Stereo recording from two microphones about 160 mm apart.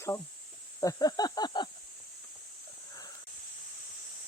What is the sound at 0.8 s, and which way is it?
Snake, 20° left (ahead or behind).